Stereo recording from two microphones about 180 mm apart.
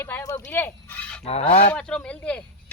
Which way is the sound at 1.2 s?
35° left (ahead or behind).